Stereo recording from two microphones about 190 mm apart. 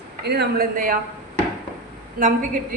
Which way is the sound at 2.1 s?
45° right (ahead or behind).